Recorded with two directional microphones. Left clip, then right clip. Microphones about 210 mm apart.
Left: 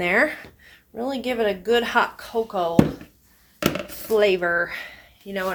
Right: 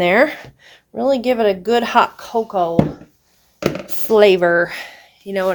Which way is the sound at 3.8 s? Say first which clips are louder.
Right 9 dB; 50° right (ahead or behind).